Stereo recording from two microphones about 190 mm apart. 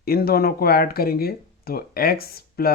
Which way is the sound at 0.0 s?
55° left (ahead or behind).